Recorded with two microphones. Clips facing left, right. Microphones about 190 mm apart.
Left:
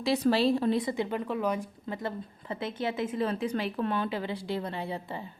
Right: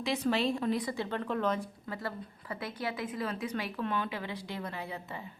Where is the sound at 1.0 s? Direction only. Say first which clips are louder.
Left 2 dB; 10° left (ahead or behind); by 5.2 s 30° left (ahead or behind).